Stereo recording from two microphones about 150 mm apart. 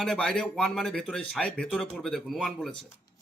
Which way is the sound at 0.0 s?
5° left (ahead or behind).